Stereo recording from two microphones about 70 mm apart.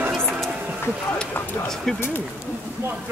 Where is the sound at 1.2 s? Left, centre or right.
Centre.